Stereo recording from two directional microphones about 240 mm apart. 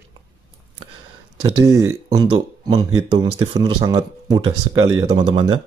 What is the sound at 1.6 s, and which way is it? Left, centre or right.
Speech, centre.